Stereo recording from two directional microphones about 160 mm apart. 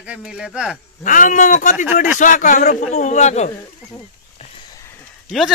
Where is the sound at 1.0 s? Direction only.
55° left (ahead or behind).